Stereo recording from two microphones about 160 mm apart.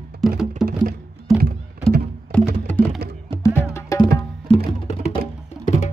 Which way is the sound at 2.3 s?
5° left (ahead or behind).